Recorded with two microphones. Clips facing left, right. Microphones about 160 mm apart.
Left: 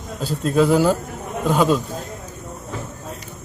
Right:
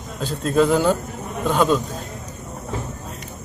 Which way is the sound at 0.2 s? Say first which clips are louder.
Even; 5° left (ahead or behind).